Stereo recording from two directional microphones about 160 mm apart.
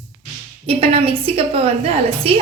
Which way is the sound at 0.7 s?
35° right (ahead or behind).